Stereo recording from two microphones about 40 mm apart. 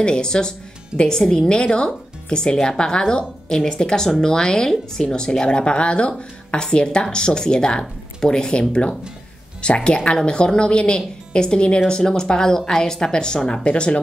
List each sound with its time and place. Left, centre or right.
0.0 s speech: centre